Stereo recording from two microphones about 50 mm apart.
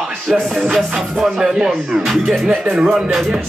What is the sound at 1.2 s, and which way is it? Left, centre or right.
Speech, centre.